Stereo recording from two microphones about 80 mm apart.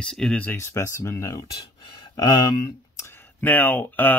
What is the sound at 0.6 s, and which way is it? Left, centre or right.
Speech, left.